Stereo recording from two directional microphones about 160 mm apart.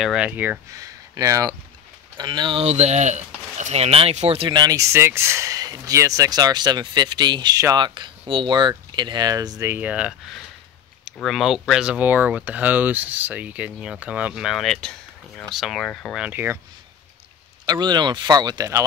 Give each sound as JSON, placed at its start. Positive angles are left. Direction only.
{"t": 0.0, "sound": "speech", "side_deg": -5}
{"t": 0.7, "sound": "speech", "side_deg": -20}
{"t": 2.6, "sound": "speech", "side_deg": -45}
{"t": 4.5, "sound": "speech", "side_deg": -25}
{"t": 16.2, "sound": "speech", "side_deg": -10}
{"t": 17.6, "sound": "speech", "side_deg": -25}